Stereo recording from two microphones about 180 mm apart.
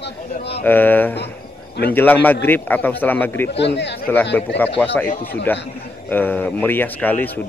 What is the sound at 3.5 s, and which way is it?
Speech, 70° left (ahead or behind).